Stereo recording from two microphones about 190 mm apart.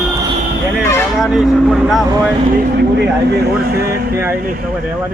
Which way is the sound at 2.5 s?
60° right (ahead or behind).